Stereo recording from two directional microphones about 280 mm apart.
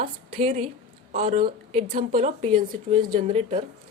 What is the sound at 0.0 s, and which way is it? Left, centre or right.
A woman's voice, right.